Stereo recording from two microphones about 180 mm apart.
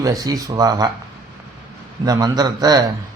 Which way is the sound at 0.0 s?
20° right (ahead or behind).